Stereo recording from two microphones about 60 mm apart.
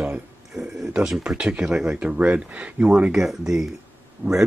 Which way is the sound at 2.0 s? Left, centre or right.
Right.